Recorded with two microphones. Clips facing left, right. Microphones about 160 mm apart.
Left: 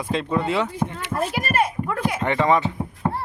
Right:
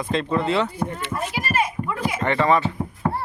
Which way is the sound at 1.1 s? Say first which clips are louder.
Left 3 dB; 30° left (ahead or behind).